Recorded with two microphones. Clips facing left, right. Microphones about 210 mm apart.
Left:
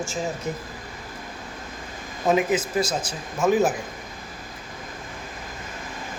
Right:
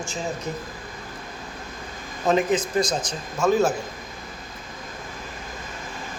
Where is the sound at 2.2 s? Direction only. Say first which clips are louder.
Even; 10° left (ahead or behind).